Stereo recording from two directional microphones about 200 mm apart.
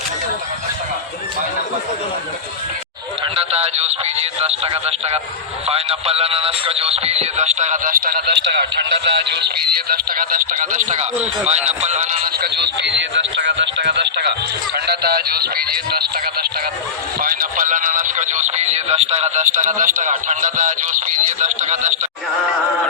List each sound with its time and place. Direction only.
3.3 s music: 30° right (ahead or behind); by 9.5 s 55° right (ahead or behind)
9.9 s music: 45° right (ahead or behind)
12.4 s speech: 55° right (ahead or behind)
17.2 s music: 45° right (ahead or behind)